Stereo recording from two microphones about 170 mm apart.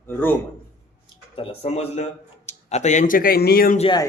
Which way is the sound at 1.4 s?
35° left (ahead or behind).